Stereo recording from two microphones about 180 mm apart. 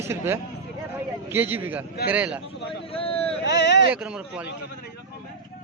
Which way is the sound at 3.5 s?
75° left (ahead or behind).